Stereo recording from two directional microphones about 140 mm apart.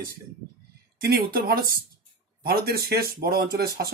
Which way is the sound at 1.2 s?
90° right.